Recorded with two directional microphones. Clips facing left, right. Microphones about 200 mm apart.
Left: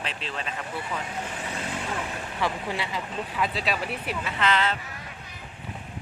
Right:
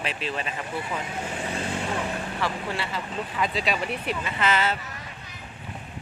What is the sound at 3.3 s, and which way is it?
Speech, 5° left (ahead or behind).